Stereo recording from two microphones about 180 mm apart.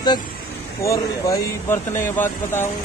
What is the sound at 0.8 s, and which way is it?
Speech, 20° left (ahead or behind).